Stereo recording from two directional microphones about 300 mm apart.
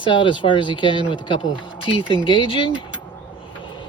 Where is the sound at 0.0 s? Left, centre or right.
Centre.